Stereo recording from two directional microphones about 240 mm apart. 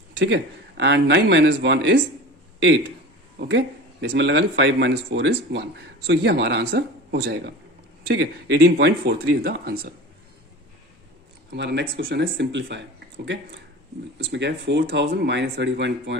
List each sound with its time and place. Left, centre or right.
0.2 s speech: right
4.0 s speech: right
11.5 s speech: right
14.2 s speech: right